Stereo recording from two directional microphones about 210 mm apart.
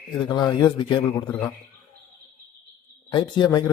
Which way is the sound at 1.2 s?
5° left (ahead or behind).